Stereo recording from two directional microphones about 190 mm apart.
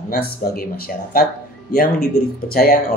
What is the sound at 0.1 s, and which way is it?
A man's voice, 50° left (ahead or behind).